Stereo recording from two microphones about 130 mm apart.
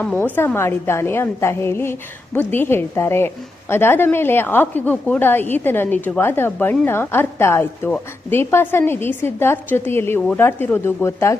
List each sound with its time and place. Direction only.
0.2 s a woman's voice: 15° left (ahead or behind)